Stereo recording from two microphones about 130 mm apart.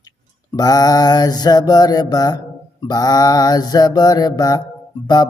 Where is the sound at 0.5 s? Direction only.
30° left (ahead or behind).